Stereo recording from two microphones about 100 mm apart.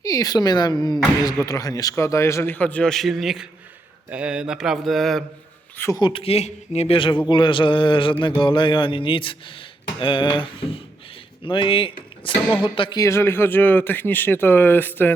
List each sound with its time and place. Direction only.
0.0 s speech: 35° left (ahead or behind); by 3.4 s 5° right (ahead or behind)
4.1 s mantra: 10° right (ahead or behind)
6.0 s speech: 50° left (ahead or behind)
6.2 s speech: 90° left; by 7.2 s 60° left (ahead or behind)
7.3 s a sound: 55° left (ahead or behind)
11.4 s speech: 55° left (ahead or behind)
12.6 s a sound: 55° left (ahead or behind)
13.0 s speech: 30° left (ahead or behind)